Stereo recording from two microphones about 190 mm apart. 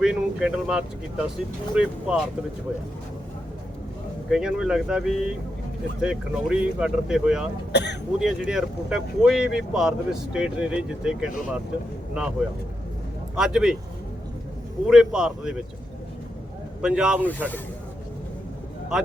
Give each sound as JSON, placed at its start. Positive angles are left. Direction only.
{"t": 0.0, "sound": "speech", "side_deg": -5}
{"t": 4.3, "sound": "speech", "side_deg": -5}
{"t": 7.7, "sound": "speech", "side_deg": 65}
{"t": 8.2, "sound": "speech", "side_deg": -5}
{"t": 13.3, "sound": "speech", "side_deg": -5}
{"t": 14.8, "sound": "speech", "side_deg": -5}
{"t": 16.8, "sound": "speech", "side_deg": -5}
{"t": 17.2, "sound": "speech", "side_deg": 10}